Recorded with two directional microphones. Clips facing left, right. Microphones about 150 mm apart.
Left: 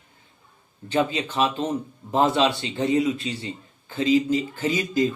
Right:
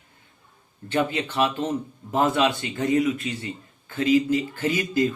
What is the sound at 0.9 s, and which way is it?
Speech, 15° left (ahead or behind).